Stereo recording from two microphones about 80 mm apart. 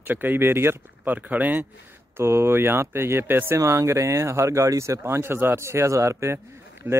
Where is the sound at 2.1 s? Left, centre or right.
Right.